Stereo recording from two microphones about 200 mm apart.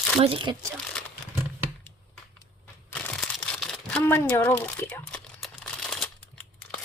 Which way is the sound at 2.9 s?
5° left (ahead or behind).